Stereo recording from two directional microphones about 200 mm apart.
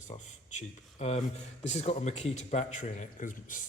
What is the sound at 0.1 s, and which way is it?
A man's voice, 35° left (ahead or behind).